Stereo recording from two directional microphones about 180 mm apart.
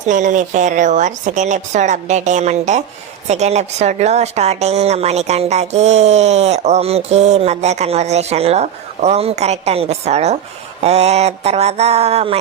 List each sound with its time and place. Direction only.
0.0 s a woman's voice: 45° right (ahead or behind)